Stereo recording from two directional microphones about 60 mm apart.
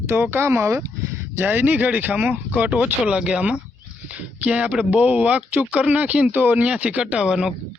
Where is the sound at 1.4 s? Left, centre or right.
Right.